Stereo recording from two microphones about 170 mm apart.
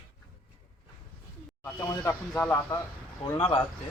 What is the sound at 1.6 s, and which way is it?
Speech, 15° left (ahead or behind).